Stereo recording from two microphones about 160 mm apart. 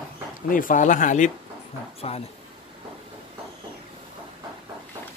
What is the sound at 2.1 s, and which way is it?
Speech, 40° left (ahead or behind).